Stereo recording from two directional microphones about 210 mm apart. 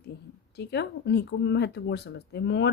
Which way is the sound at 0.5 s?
50° left (ahead or behind).